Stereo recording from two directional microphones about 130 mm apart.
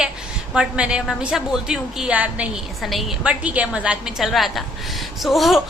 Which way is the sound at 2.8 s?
Centre (ahead or behind).